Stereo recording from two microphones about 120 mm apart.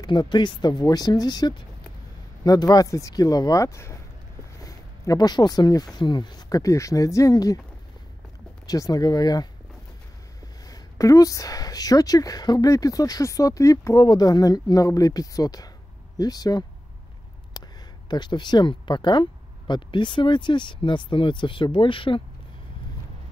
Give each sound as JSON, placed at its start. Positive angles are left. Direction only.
{"t": 0.0, "sound": "speech", "side_deg": 40}
{"t": 8.6, "sound": "speech", "side_deg": 30}
{"t": 10.7, "sound": "speech", "side_deg": 30}